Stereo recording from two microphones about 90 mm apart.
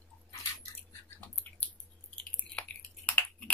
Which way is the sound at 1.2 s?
15° left (ahead or behind).